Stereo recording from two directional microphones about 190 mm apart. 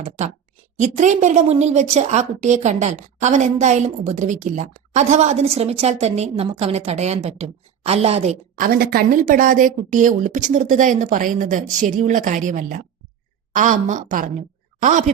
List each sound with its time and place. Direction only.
0.8 s a woman's voice: 40° right (ahead or behind)
8.6 s a woman's voice: 55° right (ahead or behind)